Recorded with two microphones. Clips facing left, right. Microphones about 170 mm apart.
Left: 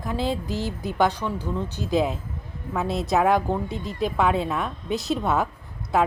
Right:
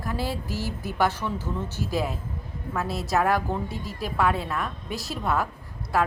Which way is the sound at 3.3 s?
15° left (ahead or behind).